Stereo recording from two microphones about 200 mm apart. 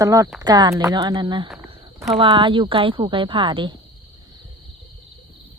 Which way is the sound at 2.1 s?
25° right (ahead or behind).